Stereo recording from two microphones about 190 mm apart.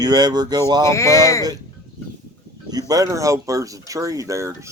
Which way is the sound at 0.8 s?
15° left (ahead or behind).